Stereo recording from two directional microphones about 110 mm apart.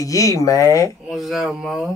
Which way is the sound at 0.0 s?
30° left (ahead or behind).